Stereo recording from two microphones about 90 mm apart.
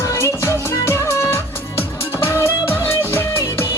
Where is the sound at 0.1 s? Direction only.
30° left (ahead or behind).